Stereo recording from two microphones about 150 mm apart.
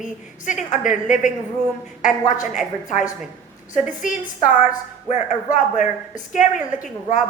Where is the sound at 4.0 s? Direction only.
60° left (ahead or behind).